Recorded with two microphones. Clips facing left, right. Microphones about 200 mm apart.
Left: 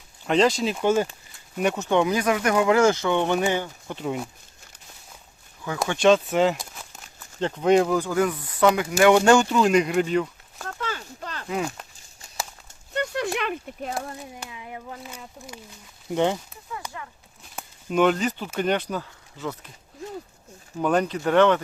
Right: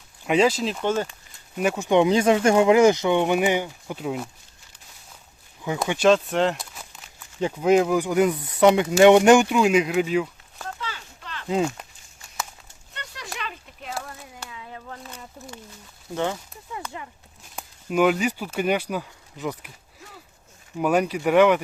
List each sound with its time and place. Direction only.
0.3 s speech: 5° right (ahead or behind); by 1.0 s 10° left (ahead or behind)
1.5 s speech: 5° right (ahead or behind)
5.6 s speech: 20° right (ahead or behind)
6.0 s speech: centre (ahead or behind)
10.8 s a sound: 50° left (ahead or behind)
11.4 s speech: 25° right (ahead or behind)
12.9 s a sound: 50° left (ahead or behind)
14.3 s a sound: 20° left (ahead or behind)
16.0 s speech: 20° left (ahead or behind)
17.5 s speech: 5° right (ahead or behind)
20.7 s speech: 10° right (ahead or behind)